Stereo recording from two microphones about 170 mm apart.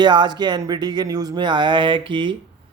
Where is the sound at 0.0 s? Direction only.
25° right (ahead or behind).